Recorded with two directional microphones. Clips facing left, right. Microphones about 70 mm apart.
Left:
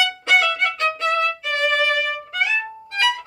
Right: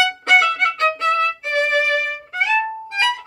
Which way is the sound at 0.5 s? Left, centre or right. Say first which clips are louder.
Right 3 dB; right.